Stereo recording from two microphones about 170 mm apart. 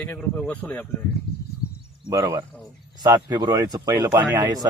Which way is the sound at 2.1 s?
20° right (ahead or behind).